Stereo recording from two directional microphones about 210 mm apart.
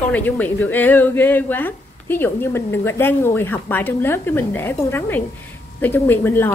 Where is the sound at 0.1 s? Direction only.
10° left (ahead or behind).